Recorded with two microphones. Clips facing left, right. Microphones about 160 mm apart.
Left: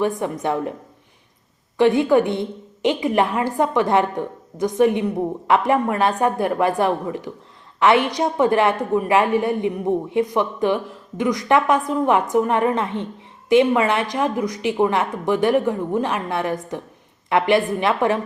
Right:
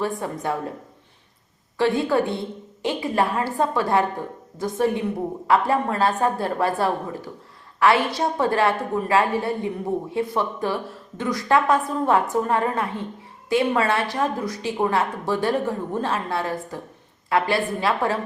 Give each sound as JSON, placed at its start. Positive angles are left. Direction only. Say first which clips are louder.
{"t": 0.0, "sound": "speech", "louder": "left 4 dB", "side_deg": 20}
{"t": 1.8, "sound": "a woman's voice", "louder": "left 5 dB", "side_deg": 20}